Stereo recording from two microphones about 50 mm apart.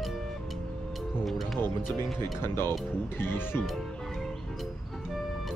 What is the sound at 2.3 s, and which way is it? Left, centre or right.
Speech, left.